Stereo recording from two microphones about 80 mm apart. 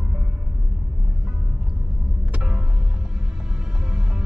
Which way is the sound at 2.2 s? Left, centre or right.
Centre.